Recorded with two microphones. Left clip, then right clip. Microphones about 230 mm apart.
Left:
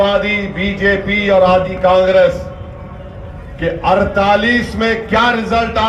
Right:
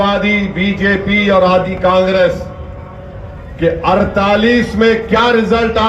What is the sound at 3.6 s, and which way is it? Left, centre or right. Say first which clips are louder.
A man's voice: right 1 dB; left.